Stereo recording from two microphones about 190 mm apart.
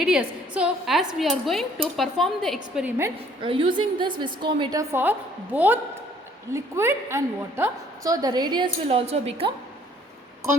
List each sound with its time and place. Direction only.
0.0 s speech: 5° right (ahead or behind)
3.4 s a woman's voice: 30° right (ahead or behind)